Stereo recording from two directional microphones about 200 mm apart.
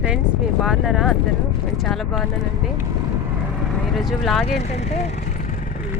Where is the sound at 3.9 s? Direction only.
Centre (ahead or behind).